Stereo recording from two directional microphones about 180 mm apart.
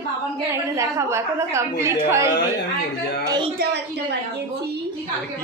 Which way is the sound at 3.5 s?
70° right (ahead or behind).